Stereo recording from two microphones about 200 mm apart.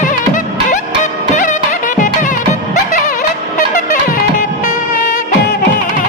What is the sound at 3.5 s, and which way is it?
Music, 40° left (ahead or behind).